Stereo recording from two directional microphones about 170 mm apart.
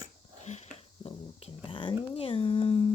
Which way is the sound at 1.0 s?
30° left (ahead or behind).